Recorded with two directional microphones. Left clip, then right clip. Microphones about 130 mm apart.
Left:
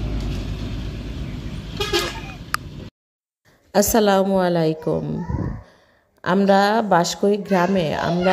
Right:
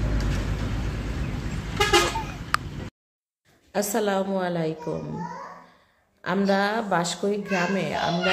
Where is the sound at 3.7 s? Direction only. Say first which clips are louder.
Left 8 dB; 90° left.